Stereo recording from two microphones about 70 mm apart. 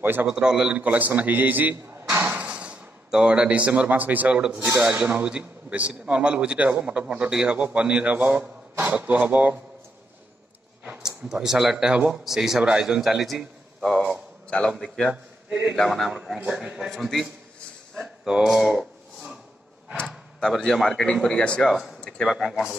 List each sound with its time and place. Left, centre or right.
0.0 s a man's voice: right
0.3 s a man's voice: centre; by 2.2 s right
2.4 s a man's voice: centre
11.0 s a man's voice: centre
14.5 s speech: centre
15.0 s a man's voice: centre
15.7 s a man's voice: centre
16.1 s a man's voice: centre
18.0 s a sound: centre
20.5 s a man's voice: centre
22.3 s a man's voice: centre